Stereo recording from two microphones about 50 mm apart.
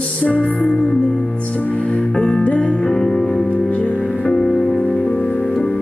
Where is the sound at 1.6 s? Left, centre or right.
Left.